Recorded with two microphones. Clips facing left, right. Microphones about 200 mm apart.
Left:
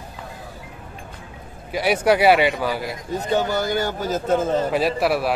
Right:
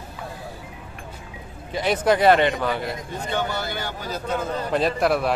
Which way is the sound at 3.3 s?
40° left (ahead or behind).